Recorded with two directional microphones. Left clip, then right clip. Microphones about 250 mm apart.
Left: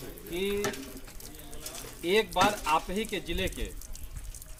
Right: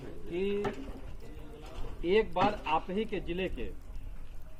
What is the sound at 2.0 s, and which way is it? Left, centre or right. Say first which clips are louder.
Speech: left 2 dB; centre.